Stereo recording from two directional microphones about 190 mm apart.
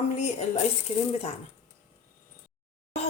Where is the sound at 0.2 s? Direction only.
40° left (ahead or behind).